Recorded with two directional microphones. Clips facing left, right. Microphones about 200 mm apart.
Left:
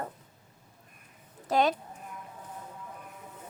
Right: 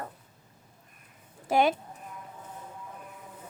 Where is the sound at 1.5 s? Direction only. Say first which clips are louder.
Right 2 dB; 10° right (ahead or behind).